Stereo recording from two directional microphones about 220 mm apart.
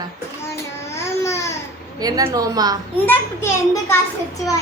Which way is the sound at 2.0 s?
15° right (ahead or behind).